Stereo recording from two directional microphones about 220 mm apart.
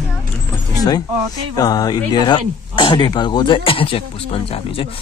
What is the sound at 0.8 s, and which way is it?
Speech, 15° left (ahead or behind).